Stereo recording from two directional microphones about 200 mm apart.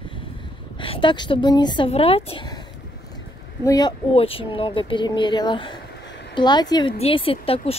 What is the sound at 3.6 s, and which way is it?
Speech, 20° left (ahead or behind).